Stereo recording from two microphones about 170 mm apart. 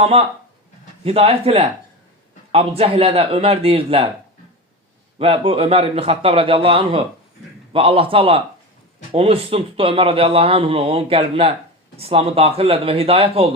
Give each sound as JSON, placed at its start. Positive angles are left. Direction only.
{"t": 0.0, "sound": "speech", "side_deg": -35}
{"t": 5.2, "sound": "speech", "side_deg": -35}